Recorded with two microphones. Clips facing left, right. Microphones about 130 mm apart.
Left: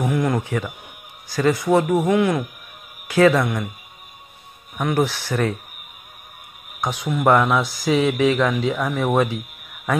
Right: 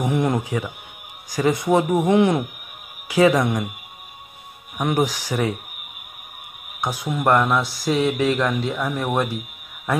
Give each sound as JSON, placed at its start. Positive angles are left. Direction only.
{"t": 0.0, "sound": "speech", "side_deg": -20}
{"t": 3.1, "sound": "speech", "side_deg": -15}
{"t": 4.7, "sound": "speech", "side_deg": -15}
{"t": 6.8, "sound": "speech", "side_deg": -5}